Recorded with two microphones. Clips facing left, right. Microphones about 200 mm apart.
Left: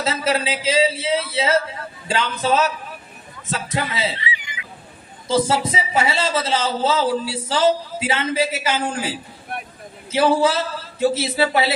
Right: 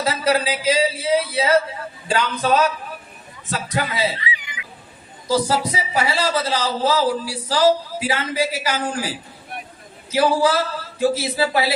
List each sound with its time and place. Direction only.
0.0 s a man's voice: 25° left (ahead or behind)